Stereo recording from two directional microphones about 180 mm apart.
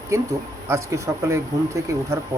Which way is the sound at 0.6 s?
15° right (ahead or behind).